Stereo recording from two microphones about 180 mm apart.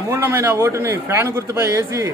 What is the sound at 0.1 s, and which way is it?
Speech, 10° right (ahead or behind).